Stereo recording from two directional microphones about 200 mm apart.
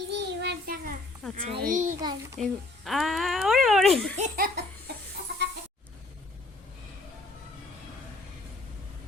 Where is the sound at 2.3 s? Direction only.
Centre (ahead or behind).